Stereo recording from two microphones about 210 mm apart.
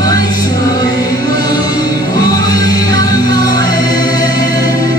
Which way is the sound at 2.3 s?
20° left (ahead or behind).